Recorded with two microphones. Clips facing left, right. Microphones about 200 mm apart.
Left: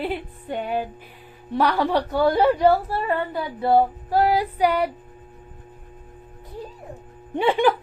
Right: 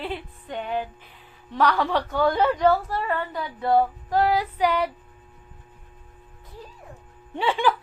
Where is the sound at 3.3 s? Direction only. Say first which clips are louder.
Left 2 dB; 30° left (ahead or behind).